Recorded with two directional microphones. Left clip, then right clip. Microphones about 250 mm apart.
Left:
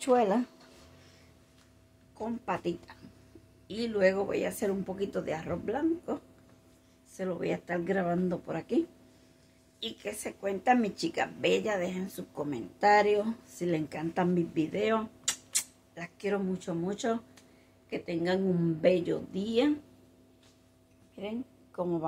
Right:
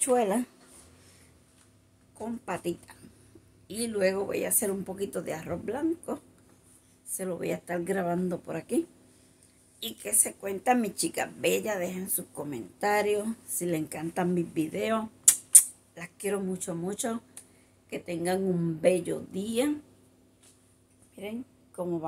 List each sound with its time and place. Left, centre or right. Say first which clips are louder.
0.0 s speech: even; centre
2.1 s speech: left 1 dB; centre
7.2 s speech: even; centre
21.2 s a woman's voice: even; centre